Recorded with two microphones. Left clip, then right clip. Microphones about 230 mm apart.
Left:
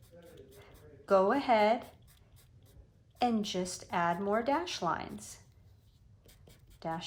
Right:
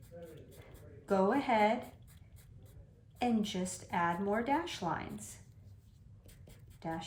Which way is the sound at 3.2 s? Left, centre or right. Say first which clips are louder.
Left 3 dB; centre.